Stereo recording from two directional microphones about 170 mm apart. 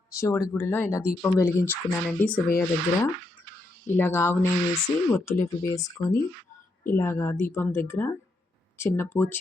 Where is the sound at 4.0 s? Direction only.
15° left (ahead or behind).